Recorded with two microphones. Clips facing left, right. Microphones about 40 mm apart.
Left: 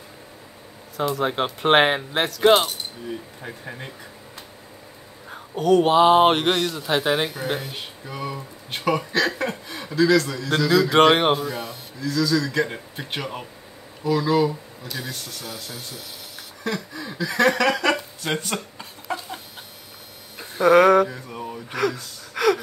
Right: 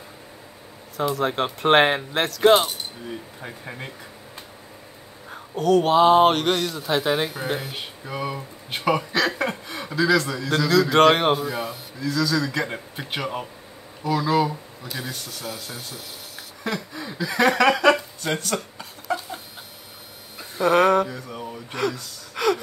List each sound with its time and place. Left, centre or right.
0.9 s speech: centre
5.3 s speech: centre
7.7 s speech: centre
10.5 s speech: centre
12.0 s speech: centre
18.2 s speech: centre
20.6 s speech: centre
21.1 s a sound: centre
22.3 s gasp: centre